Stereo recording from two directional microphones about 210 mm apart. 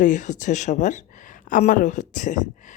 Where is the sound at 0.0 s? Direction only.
35° left (ahead or behind).